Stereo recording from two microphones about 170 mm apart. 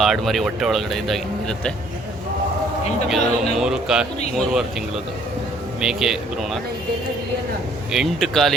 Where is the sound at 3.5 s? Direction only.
5° right (ahead or behind).